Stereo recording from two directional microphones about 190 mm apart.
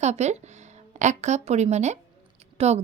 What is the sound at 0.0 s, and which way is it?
A woman's voice, 35° right (ahead or behind).